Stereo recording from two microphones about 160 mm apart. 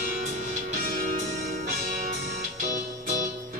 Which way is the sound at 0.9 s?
55° right (ahead or behind).